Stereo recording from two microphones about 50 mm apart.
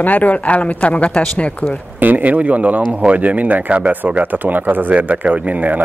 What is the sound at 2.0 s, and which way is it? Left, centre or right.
Speech, right.